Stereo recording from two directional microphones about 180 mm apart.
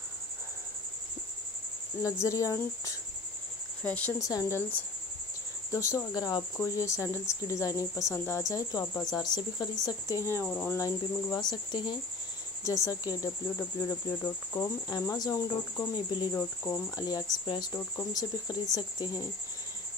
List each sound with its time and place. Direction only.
2.0 s speech: 15° left (ahead or behind)
10.8 s cricket: 20° left (ahead or behind)